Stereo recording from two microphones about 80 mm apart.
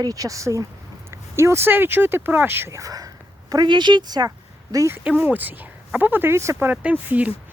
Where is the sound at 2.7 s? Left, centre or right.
Right.